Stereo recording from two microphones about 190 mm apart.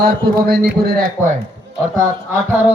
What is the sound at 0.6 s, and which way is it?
Speech, 50° right (ahead or behind).